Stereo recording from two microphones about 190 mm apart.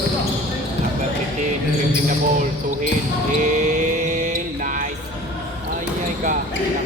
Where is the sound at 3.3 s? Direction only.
40° right (ahead or behind).